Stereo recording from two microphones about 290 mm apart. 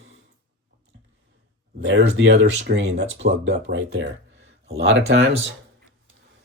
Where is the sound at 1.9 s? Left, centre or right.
Right.